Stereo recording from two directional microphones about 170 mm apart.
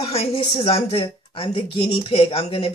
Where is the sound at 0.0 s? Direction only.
35° left (ahead or behind).